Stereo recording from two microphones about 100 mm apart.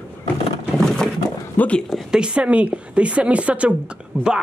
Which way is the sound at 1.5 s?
15° left (ahead or behind).